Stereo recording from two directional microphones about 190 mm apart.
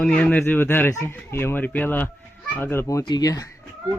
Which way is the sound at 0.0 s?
5° left (ahead or behind).